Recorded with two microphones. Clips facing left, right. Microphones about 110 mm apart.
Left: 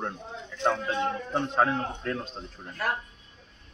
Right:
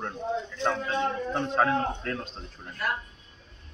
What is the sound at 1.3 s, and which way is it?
Speech, 10° left (ahead or behind).